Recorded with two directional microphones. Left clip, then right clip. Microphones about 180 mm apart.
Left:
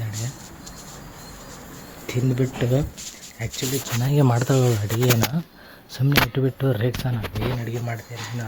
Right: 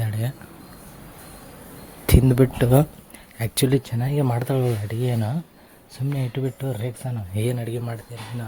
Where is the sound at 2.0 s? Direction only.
40° right (ahead or behind).